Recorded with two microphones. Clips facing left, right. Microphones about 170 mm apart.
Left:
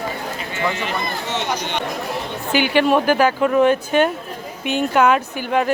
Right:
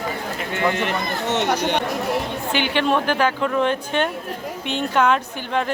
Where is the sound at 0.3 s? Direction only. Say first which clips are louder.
Right 4 dB; 60° right (ahead or behind).